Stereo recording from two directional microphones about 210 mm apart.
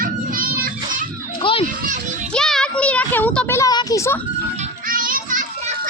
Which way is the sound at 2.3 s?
5° left (ahead or behind).